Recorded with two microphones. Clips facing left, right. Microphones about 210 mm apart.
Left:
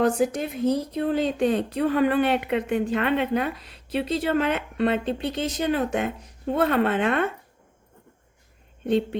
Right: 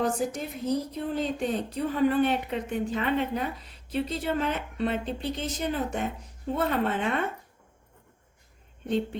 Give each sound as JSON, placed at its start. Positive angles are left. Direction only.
{"t": 0.0, "sound": "a woman's voice", "side_deg": 60}